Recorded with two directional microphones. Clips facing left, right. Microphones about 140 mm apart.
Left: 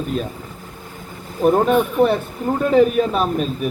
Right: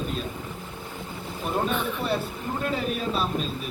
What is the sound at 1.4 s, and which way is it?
A man's voice, 55° left (ahead or behind).